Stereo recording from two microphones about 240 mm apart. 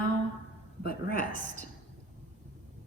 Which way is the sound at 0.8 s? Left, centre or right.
Left.